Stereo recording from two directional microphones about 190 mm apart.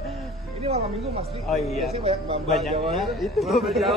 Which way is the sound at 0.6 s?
35° right (ahead or behind).